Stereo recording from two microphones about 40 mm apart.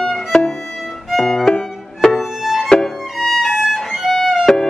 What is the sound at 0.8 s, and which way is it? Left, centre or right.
Violin, centre.